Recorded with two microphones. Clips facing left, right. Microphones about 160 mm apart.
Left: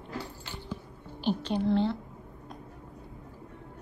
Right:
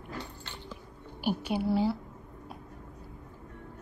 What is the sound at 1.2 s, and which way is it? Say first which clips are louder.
Speech: left 1 dB; 10° right (ahead or behind).